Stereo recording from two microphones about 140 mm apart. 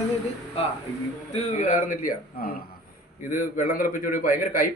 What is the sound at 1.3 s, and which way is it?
A man's voice, 60° left (ahead or behind).